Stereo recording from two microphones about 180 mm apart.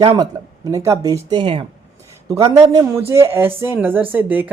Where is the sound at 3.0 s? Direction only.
15° right (ahead or behind).